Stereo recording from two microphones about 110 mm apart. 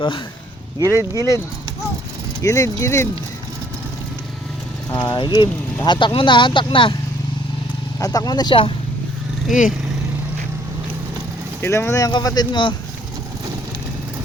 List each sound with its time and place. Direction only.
0.8 s speech: 30° right (ahead or behind)
2.4 s speech: 30° left (ahead or behind)
4.9 s speech: 45° left (ahead or behind)
7.9 s speech: 35° left (ahead or behind)
11.6 s speech: 25° left (ahead or behind); by 12.7 s 45° left (ahead or behind)